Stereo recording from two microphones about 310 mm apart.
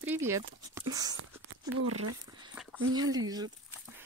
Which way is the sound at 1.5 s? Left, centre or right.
Right.